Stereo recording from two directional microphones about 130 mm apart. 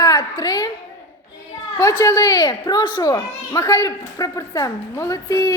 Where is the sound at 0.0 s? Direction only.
35° left (ahead or behind).